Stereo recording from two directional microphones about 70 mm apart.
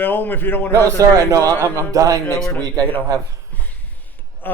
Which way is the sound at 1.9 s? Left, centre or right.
Right.